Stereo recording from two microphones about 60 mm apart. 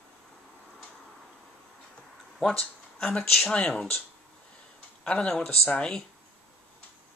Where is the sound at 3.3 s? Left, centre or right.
Centre.